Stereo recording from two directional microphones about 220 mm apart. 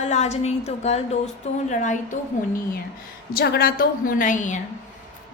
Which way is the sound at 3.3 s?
45° left (ahead or behind).